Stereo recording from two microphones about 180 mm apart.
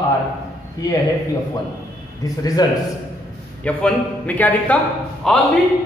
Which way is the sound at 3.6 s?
10° left (ahead or behind).